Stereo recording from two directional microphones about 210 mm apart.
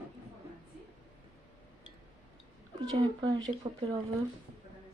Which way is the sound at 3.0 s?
20° right (ahead or behind).